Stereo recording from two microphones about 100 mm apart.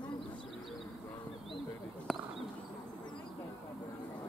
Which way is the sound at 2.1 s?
Centre (ahead or behind).